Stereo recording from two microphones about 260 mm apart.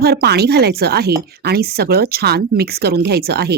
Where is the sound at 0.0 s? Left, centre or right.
Right.